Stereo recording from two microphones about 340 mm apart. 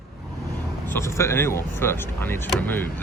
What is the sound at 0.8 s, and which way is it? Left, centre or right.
Speech, centre.